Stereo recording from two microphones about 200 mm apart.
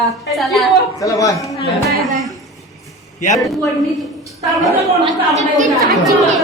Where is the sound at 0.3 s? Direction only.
Centre (ahead or behind).